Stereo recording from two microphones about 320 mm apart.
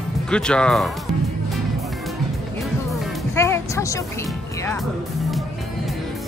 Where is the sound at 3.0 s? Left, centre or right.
Centre.